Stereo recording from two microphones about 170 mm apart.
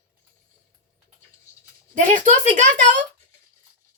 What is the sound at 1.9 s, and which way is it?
A woman's voice, 45° right (ahead or behind).